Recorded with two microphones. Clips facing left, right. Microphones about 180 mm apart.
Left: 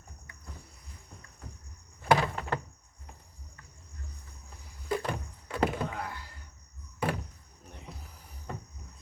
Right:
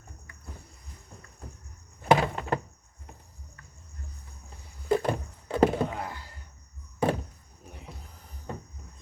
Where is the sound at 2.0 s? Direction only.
25° right (ahead or behind).